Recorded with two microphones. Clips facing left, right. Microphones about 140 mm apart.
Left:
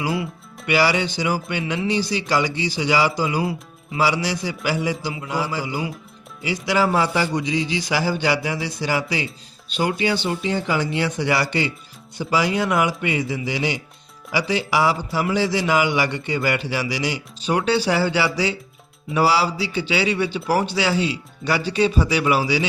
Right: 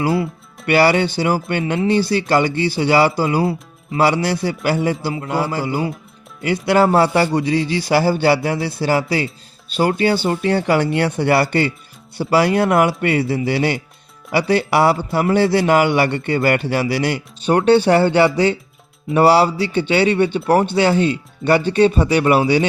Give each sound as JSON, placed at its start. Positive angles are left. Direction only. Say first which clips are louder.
{"t": 0.7, "sound": "a man's voice", "louder": "right 5 dB", "side_deg": -50}